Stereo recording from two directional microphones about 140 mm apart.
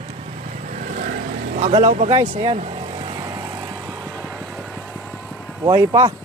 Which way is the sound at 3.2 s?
25° right (ahead or behind).